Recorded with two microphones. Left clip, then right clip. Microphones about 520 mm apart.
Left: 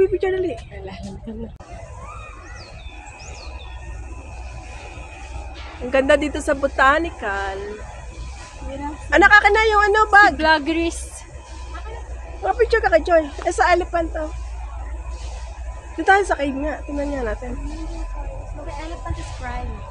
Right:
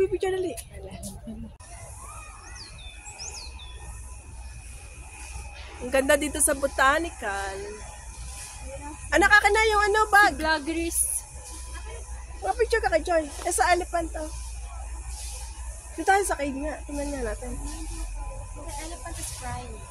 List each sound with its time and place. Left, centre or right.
0.0 s a sound: right
5.9 s speech: right
9.1 s speech: right
10.4 s speech: right
12.4 s speech: right
16.0 s speech: right
19.4 s speech: right